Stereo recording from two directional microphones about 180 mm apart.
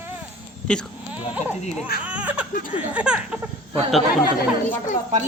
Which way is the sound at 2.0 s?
10° right (ahead or behind).